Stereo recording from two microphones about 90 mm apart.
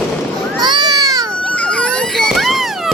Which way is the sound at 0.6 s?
55° right (ahead or behind).